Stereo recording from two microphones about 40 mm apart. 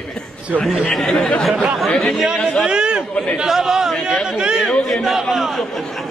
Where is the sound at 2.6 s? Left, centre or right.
Centre.